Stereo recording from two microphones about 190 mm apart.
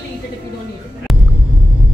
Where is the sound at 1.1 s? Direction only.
Centre (ahead or behind).